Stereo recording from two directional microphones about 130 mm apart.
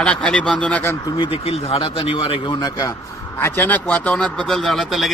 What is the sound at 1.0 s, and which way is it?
Speech, 35° left (ahead or behind).